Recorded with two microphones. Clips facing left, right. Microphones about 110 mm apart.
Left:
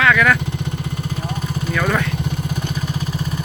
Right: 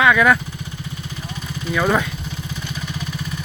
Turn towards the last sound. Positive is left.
turn(degrees=-15)  # may be behind; listen again after turning